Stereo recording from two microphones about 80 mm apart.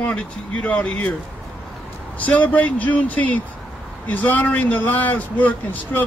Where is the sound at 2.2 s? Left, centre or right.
Centre.